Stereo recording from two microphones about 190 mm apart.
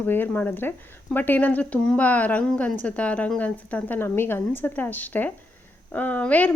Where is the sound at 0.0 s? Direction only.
10° left (ahead or behind).